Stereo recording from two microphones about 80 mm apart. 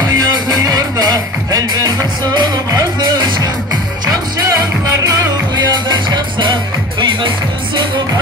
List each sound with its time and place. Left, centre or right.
0.1 s music: right
4.0 s music: right
5.9 s music: right